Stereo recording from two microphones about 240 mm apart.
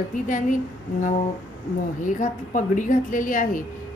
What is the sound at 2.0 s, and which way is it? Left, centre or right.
Speech, left.